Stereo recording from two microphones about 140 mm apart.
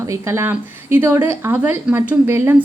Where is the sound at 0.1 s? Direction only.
20° right (ahead or behind).